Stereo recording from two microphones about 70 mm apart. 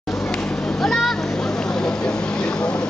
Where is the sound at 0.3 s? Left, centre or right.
Centre.